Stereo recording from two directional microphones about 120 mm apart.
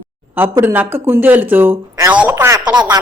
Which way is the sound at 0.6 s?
15° right (ahead or behind).